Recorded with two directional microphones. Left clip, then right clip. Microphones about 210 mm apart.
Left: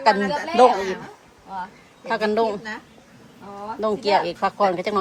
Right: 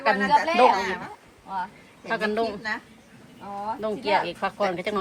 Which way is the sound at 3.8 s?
15° left (ahead or behind).